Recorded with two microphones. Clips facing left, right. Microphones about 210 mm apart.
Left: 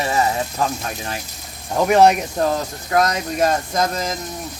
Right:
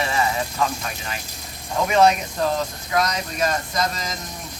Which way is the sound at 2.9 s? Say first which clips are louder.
Left 6 dB; 50° left (ahead or behind).